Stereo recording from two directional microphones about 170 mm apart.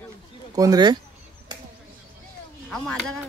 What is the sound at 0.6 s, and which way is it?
Speech, 25° right (ahead or behind).